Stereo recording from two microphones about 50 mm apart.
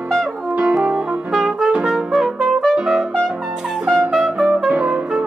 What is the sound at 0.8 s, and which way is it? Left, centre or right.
Music, centre.